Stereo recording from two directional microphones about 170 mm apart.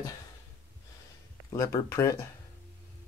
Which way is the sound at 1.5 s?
15° left (ahead or behind).